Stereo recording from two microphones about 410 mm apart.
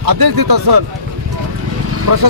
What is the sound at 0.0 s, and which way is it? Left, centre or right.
Speech, right.